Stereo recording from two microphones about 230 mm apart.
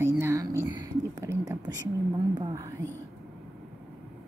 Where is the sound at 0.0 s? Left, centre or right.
Centre.